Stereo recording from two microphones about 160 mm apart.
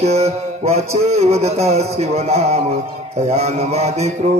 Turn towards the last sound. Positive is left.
turn(degrees=-40)  # may be behind; listen again after turning